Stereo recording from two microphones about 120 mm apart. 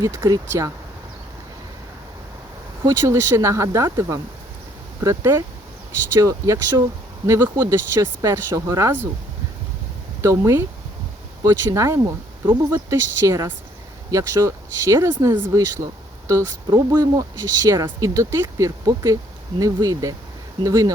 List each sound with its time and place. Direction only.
0.0 s speech: 25° right (ahead or behind)
2.8 s speech: 25° right (ahead or behind)
10.2 s speech: 25° right (ahead or behind)